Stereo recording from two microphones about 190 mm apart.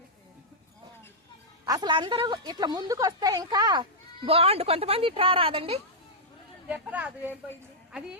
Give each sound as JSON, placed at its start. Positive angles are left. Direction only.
{"t": 1.6, "sound": "a woman's voice", "side_deg": -20}
{"t": 6.7, "sound": "speech", "side_deg": -10}